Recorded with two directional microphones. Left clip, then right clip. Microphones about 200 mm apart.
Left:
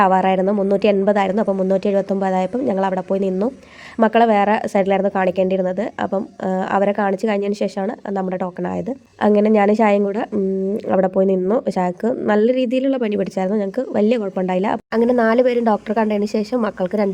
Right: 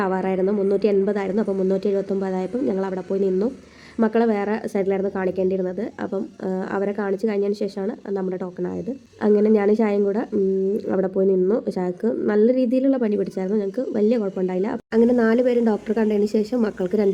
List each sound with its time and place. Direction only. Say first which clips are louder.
0.0 s a woman's voice: left 7 dB; 35° left (ahead or behind)